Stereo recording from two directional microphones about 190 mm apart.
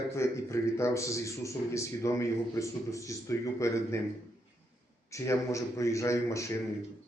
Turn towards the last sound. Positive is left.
turn(degrees=15)  # may be behind; listen again after turning